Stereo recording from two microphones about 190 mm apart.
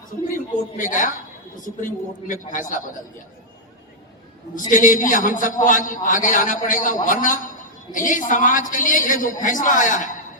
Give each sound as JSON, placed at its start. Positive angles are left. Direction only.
{"t": 0.3, "sound": "a man's voice", "side_deg": 45}
{"t": 4.7, "sound": "a man's voice", "side_deg": 45}